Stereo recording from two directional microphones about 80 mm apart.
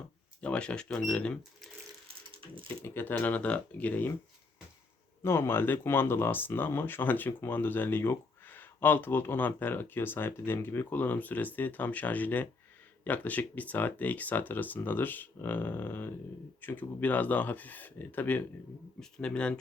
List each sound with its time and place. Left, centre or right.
0.4 s speech: centre
2.6 s speech: left
5.2 s speech: left
18.9 s speech: centre